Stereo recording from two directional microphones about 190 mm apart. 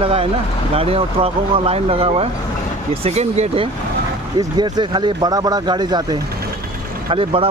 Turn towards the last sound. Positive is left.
turn(degrees=-30)  # may be behind; listen again after turning